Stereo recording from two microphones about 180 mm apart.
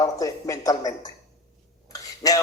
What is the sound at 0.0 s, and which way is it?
A man's voice, 20° left (ahead or behind).